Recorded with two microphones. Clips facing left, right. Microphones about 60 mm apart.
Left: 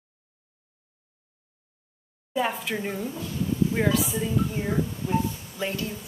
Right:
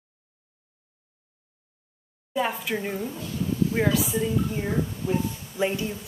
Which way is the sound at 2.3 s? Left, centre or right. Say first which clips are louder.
Even; centre.